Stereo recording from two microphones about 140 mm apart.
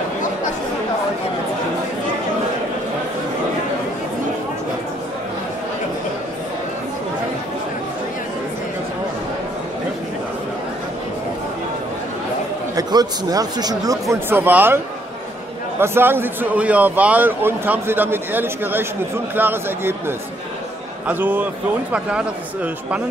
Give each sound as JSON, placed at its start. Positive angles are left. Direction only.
{"t": 12.7, "sound": "speech", "side_deg": -25}
{"t": 15.8, "sound": "a man's voice", "side_deg": -15}